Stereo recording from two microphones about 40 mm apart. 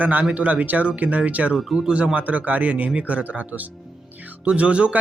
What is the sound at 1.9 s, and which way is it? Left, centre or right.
Speech, right.